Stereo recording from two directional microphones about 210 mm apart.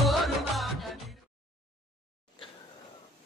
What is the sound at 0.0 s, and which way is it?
Music, centre (ahead or behind).